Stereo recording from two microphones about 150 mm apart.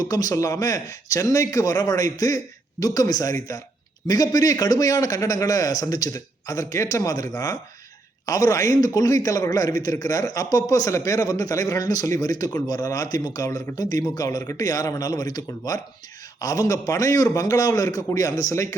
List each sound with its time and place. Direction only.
0.0 s a man's voice: 25° left (ahead or behind)